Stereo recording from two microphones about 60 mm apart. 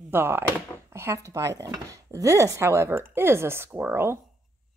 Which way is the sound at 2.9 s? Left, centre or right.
Right.